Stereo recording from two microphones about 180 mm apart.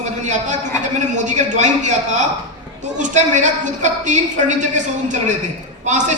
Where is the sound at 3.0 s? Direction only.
45° right (ahead or behind).